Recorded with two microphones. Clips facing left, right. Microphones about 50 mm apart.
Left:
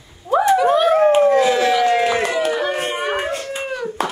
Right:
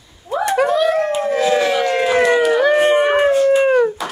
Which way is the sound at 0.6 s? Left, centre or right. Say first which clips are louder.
Left 1 dB; left.